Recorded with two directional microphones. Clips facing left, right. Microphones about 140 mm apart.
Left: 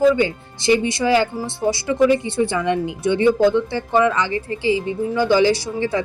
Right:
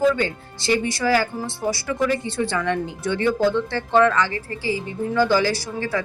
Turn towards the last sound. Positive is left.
turn(degrees=20)  # may be behind; listen again after turning